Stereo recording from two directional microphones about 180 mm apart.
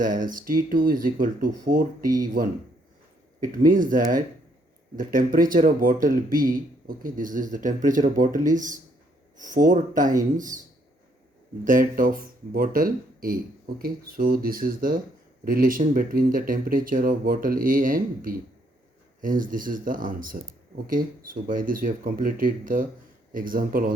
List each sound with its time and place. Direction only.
0.0 s speech: 50° right (ahead or behind)
3.7 s speech: 50° right (ahead or behind)
11.6 s speech: 50° right (ahead or behind)